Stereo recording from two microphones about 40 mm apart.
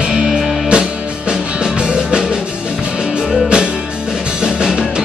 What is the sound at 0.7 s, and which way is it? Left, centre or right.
Music, right.